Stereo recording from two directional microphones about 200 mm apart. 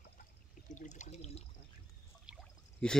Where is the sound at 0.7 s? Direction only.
35° left (ahead or behind).